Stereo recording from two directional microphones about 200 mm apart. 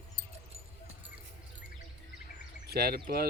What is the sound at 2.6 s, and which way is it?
Speech, 50° right (ahead or behind).